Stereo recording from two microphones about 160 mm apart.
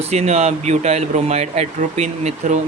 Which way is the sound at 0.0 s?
40° right (ahead or behind).